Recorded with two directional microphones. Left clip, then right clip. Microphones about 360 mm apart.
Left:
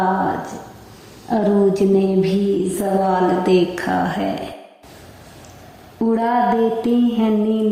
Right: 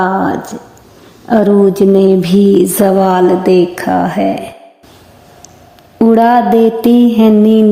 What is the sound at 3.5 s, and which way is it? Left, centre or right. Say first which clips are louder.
Speech: right 7 dB; centre.